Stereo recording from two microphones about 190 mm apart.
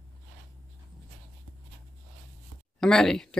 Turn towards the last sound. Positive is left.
turn(degrees=5)  # may be behind; listen again after turning